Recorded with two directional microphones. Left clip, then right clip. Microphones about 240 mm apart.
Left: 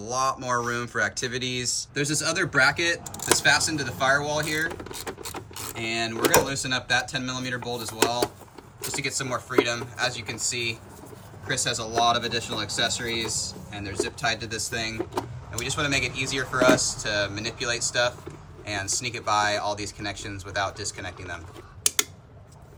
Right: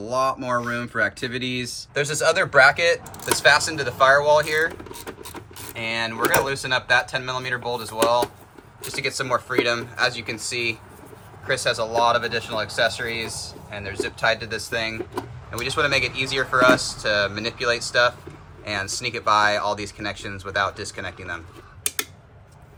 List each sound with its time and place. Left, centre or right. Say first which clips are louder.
0.0 s speech: right 3 dB; centre
4.9 s vehicle: left 1 dB; centre
5.7 s speech: right 3 dB; centre